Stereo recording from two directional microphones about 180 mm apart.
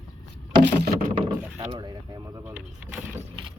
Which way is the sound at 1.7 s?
25° right (ahead or behind).